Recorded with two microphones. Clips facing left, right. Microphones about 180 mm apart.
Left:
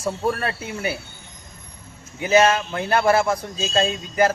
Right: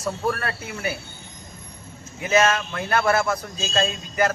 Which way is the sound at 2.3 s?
30° left (ahead or behind).